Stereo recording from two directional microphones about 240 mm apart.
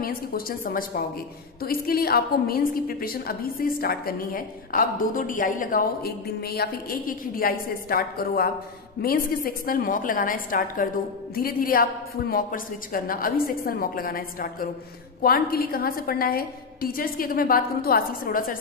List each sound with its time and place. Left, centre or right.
0.0 s a woman's voice: left